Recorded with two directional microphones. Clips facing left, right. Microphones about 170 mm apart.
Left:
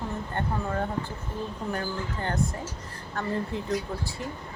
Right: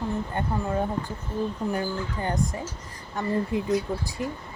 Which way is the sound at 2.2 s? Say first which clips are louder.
Right 1 dB; 15° right (ahead or behind).